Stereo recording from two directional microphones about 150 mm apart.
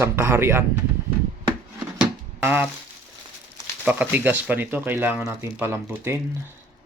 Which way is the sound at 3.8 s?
10° right (ahead or behind).